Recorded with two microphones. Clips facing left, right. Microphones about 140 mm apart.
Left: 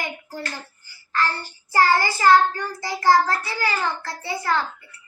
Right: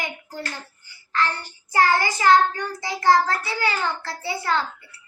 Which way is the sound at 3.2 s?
25° right (ahead or behind).